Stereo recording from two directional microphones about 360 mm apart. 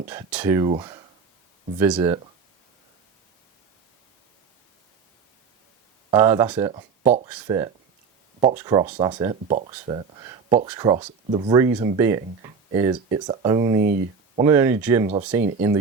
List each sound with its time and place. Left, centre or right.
0.1 s speech: centre
6.1 s speech: centre
13.8 s speech: right
14.4 s speech: centre